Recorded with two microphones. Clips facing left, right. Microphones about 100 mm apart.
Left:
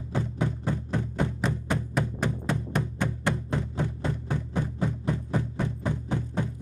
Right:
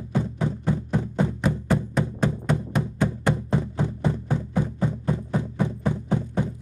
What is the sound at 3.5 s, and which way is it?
Music, 20° right (ahead or behind).